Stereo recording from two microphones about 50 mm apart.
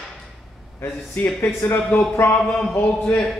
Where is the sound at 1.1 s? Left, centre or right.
Left.